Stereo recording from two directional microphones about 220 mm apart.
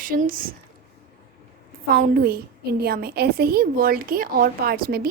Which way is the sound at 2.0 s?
40° right (ahead or behind).